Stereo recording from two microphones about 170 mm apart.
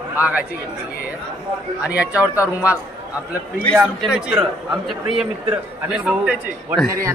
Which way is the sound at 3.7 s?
Centre (ahead or behind).